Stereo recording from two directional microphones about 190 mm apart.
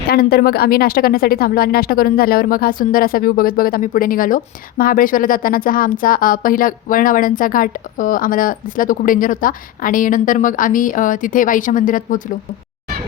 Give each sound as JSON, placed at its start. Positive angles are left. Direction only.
{"t": 0.1, "sound": "a woman's voice", "side_deg": 55}